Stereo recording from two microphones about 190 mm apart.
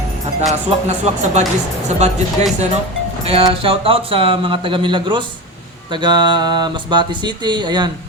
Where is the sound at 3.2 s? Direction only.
30° right (ahead or behind).